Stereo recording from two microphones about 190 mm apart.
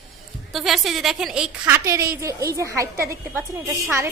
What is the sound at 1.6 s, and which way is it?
A woman's voice, 15° right (ahead or behind).